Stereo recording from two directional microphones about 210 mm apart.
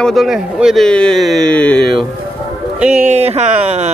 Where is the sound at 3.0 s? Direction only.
30° right (ahead or behind).